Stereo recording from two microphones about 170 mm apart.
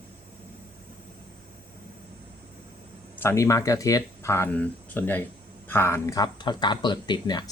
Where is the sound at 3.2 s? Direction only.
15° left (ahead or behind).